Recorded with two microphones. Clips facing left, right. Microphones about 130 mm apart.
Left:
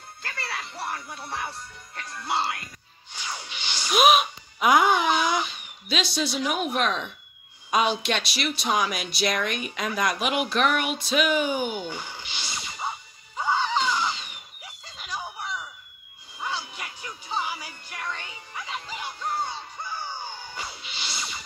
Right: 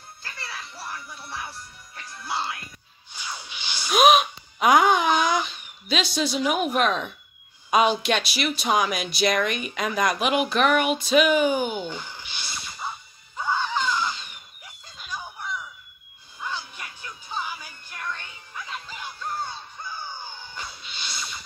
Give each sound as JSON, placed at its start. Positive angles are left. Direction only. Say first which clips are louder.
{"t": 0.2, "sound": "music", "louder": "left 4 dB", "side_deg": 70}
{"t": 2.0, "sound": "speech", "louder": "left 3 dB", "side_deg": 70}
{"t": 3.6, "sound": "a sound", "louder": "even", "side_deg": 15}
{"t": 3.9, "sound": "speech", "louder": "right 2 dB", "side_deg": 0}
{"t": 11.8, "sound": "a sound", "louder": "right 1 dB", "side_deg": 15}
{"t": 13.4, "sound": "screaming", "louder": "left 1 dB", "side_deg": 15}
{"t": 16.3, "sound": "music", "louder": "left 1 dB", "side_deg": 15}
{"t": 20.6, "sound": "music", "louder": "left 1 dB", "side_deg": 5}